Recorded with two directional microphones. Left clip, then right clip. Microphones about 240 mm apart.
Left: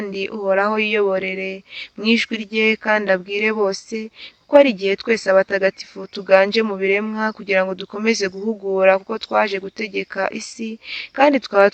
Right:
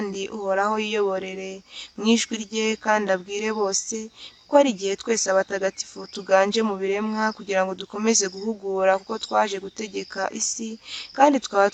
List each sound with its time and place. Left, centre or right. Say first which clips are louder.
0.0 s speech: left 5 dB; left